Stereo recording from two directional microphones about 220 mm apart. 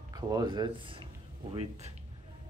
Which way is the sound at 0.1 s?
15° right (ahead or behind).